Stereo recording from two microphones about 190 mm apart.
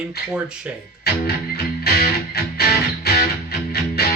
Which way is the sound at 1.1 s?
55° left (ahead or behind).